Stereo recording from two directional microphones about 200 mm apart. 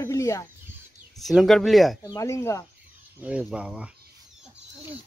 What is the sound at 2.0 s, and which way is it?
Speech, 15° left (ahead or behind).